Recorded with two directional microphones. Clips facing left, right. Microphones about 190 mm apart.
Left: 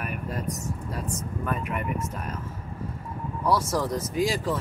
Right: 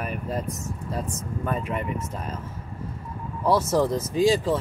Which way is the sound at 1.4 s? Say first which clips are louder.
Right 3 dB; 30° right (ahead or behind).